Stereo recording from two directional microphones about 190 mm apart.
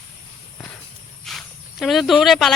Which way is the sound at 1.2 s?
Centre (ahead or behind).